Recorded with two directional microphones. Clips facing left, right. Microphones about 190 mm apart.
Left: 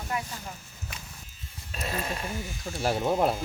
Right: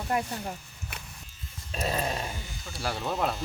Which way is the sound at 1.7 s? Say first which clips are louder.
Right 3 dB; 30° right (ahead or behind).